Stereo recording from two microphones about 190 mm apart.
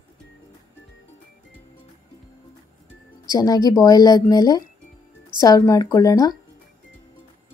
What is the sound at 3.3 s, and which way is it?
A woman's voice, 20° left (ahead or behind).